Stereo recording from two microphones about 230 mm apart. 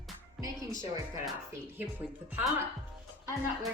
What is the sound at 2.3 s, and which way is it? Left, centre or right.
Speech, centre.